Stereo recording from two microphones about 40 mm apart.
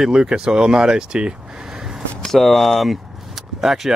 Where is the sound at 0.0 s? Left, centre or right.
Centre.